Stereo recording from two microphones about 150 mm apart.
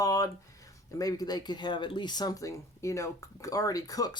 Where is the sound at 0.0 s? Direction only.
20° left (ahead or behind).